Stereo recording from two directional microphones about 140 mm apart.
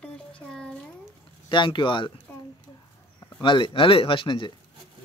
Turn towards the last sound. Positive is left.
turn(degrees=35)  # may be behind; listen again after turning